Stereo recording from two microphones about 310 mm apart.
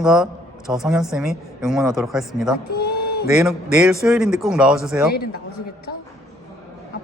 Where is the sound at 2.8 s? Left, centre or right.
Left.